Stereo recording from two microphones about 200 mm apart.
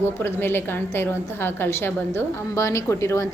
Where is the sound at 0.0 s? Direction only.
10° left (ahead or behind).